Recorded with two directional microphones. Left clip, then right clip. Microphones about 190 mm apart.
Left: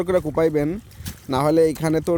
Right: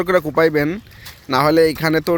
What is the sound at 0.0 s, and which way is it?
Speech, 10° left (ahead or behind).